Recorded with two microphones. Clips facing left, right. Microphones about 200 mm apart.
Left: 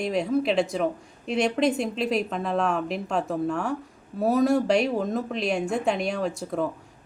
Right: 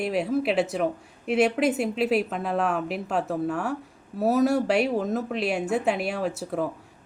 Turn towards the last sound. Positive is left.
turn(degrees=-5)  # may be behind; listen again after turning